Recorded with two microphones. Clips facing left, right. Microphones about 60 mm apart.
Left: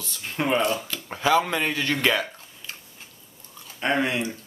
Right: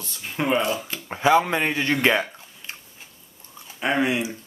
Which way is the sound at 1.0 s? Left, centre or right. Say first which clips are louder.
Right 3 dB; right.